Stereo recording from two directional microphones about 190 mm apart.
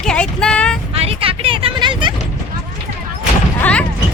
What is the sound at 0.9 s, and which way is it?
Vehicle, 30° right (ahead or behind).